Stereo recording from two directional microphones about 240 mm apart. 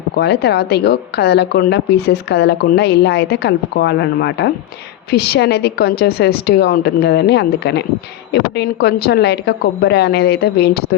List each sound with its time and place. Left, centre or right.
0.2 s a woman's voice: left